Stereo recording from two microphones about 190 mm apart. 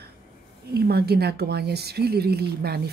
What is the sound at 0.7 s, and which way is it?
A woman's voice, 55° right (ahead or behind).